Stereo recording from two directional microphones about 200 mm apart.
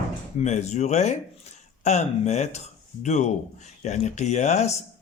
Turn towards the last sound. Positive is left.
turn(degrees=35)  # may be behind; listen again after turning